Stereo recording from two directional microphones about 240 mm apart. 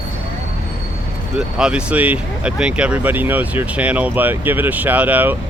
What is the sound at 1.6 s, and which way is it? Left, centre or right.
Speech, centre.